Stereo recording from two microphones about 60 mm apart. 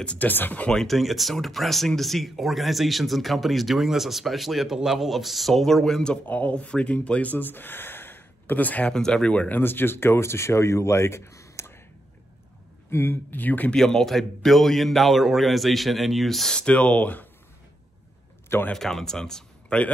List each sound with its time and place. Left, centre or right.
0.0 s speech: centre
0.3 s speech: left
0.7 s speech: centre
6.2 s speech: left
8.9 s speech: centre
9.6 s speech: left
12.9 s speech: left
13.7 s speech: centre
16.5 s speech: centre
18.7 s speech: centre